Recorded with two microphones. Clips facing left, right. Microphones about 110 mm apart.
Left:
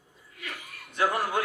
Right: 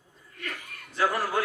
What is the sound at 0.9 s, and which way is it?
Speech, 20° left (ahead or behind).